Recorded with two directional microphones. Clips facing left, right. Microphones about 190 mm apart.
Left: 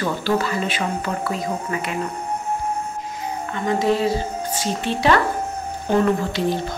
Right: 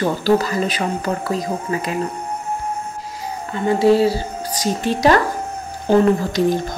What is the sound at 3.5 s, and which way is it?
Speech, 30° right (ahead or behind).